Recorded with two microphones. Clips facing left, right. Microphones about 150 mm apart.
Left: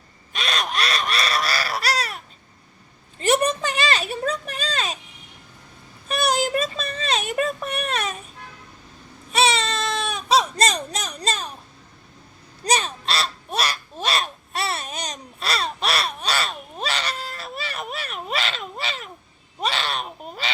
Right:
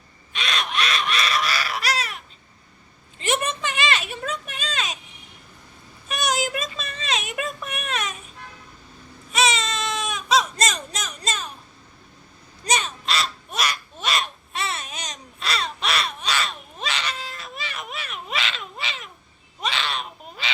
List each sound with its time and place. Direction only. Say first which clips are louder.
0.3 s crow: left 1 dB; 40° left (ahead or behind)
3.2 s a sound: left 5 dB; 40° left (ahead or behind)
6.1 s child singing: left 3 dB; 30° left (ahead or behind)
9.3 s baby cry: left 2 dB; 35° left (ahead or behind)
12.6 s crow: left 2 dB; 35° left (ahead or behind)
19.5 s a sound: left 2 dB; 40° left (ahead or behind)